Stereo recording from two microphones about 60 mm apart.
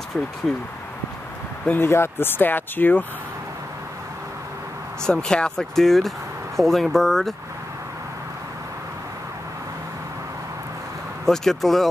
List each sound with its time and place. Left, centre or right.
0.5 s speech: centre
1.9 s speech: left
5.0 s speech: centre
11.2 s speech: centre